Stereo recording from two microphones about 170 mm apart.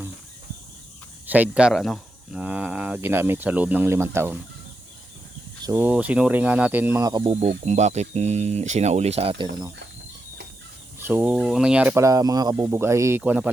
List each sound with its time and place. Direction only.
1.3 s speech: 5° right (ahead or behind)
5.7 s speech: 10° right (ahead or behind)
7.1 s speech: 30° right (ahead or behind)
7.6 s speech: 40° right (ahead or behind)
11.0 s speech: 10° right (ahead or behind)
12.0 s speech: 20° right (ahead or behind)